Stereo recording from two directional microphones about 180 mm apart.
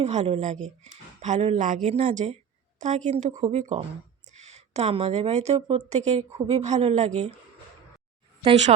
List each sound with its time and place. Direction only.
0.0 s a woman's voice: 35° right (ahead or behind)
8.4 s speech: 35° right (ahead or behind)